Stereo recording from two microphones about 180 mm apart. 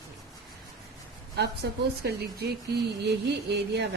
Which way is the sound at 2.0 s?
65° right (ahead or behind).